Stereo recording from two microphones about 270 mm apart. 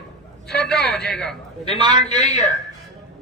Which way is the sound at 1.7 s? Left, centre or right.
Left.